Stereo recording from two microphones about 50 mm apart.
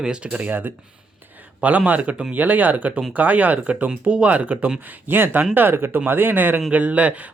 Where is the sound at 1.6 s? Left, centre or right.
Right.